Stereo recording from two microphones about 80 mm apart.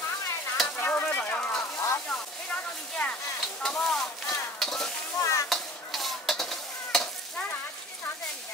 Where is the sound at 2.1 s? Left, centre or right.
Centre.